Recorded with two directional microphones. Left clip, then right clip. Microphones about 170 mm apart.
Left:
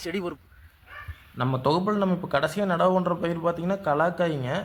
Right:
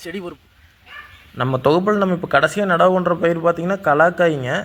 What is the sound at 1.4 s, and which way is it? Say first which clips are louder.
Speech: right 8 dB; 25° right (ahead or behind).